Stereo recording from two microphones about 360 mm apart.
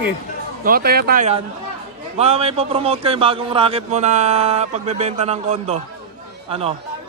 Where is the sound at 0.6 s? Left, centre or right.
Right.